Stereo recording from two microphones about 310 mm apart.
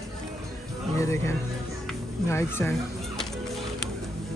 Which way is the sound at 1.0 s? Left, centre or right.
Centre.